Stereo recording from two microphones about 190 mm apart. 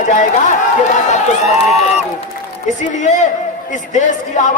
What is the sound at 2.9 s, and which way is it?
Speech, 40° left (ahead or behind).